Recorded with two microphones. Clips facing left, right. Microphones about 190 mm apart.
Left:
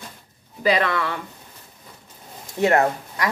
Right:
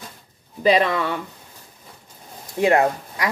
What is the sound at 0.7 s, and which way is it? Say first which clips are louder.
Speech: right 2 dB; 15° right (ahead or behind).